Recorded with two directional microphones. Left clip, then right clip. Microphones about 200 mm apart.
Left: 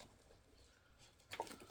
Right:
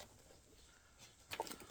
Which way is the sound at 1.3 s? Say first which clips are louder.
Right 2 dB; 10° right (ahead or behind).